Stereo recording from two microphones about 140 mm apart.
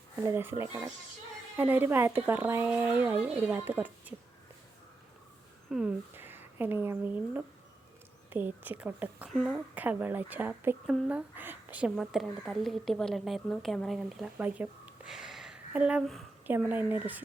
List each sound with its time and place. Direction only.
0.2 s a woman's voice: 15° right (ahead or behind)
5.7 s a woman's voice: 5° right (ahead or behind)
9.3 s speech: centre (ahead or behind)
9.7 s a woman's voice: 10° right (ahead or behind)
11.9 s a woman's voice: centre (ahead or behind)